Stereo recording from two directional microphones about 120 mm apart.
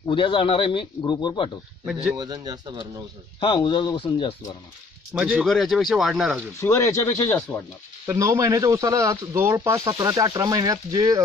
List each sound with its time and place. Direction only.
0.1 s speech: 45° left (ahead or behind)
1.9 s speech: 5° right (ahead or behind)
2.1 s speech: 35° right (ahead or behind)
3.3 s speech: 40° left (ahead or behind)
5.1 s speech: 5° right (ahead or behind)
6.6 s speech: 20° left (ahead or behind)
8.1 s speech: 25° right (ahead or behind)